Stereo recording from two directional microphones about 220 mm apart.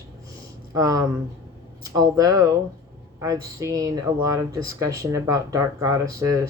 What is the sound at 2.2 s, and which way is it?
Speech, 15° right (ahead or behind).